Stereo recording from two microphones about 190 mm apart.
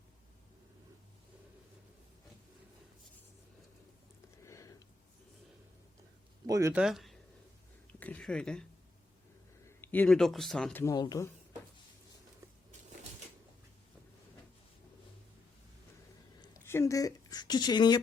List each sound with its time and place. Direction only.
4.4 s a sound: 15° left (ahead or behind)
6.5 s speech: 15° right (ahead or behind)
6.8 s a sound: centre (ahead or behind)
9.6 s a man's voice: 10° left (ahead or behind)
10.9 s speech: 20° left (ahead or behind)
16.4 s a woman's voice: 15° left (ahead or behind)